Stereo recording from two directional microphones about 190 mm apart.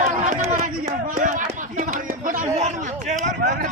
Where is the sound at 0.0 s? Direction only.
40° right (ahead or behind).